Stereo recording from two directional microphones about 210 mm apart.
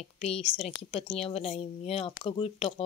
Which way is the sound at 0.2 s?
30° left (ahead or behind).